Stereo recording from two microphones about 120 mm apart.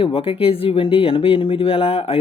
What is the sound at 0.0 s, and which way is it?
Speech, 50° left (ahead or behind).